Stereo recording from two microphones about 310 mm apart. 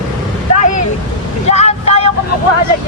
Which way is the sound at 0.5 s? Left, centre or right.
Left.